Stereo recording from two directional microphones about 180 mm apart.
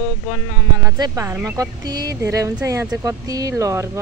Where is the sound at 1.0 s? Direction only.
15° right (ahead or behind).